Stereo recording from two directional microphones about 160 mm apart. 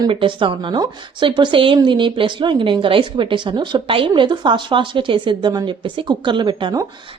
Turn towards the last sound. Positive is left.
turn(degrees=-30)  # may be behind; listen again after turning